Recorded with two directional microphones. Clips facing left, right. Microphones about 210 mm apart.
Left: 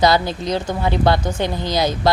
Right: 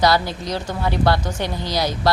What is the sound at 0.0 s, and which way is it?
Speech, 20° left (ahead or behind).